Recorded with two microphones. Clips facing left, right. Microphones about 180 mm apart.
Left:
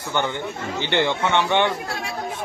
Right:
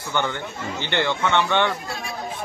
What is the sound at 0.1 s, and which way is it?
Speech, 15° left (ahead or behind).